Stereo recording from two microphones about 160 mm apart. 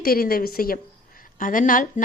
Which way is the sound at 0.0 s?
65° left (ahead or behind).